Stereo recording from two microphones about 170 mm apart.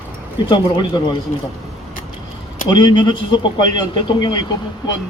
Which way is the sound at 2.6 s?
25° left (ahead or behind).